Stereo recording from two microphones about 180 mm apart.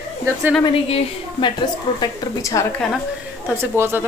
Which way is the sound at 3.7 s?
15° right (ahead or behind).